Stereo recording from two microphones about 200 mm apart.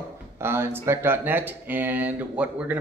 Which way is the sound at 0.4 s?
10° right (ahead or behind).